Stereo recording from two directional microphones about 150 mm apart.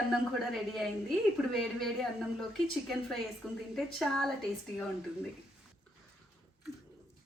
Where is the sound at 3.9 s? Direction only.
5° left (ahead or behind).